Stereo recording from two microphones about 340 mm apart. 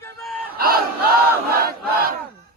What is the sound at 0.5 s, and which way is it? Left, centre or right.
Crowd, right.